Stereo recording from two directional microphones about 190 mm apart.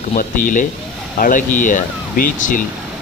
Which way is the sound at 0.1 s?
45° left (ahead or behind).